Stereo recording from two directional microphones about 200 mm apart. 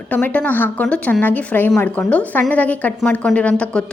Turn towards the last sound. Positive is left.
turn(degrees=5)  # may be behind; listen again after turning